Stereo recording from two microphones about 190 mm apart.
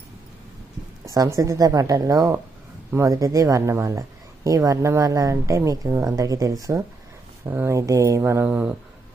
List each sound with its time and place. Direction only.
1.0 s speech: 20° right (ahead or behind)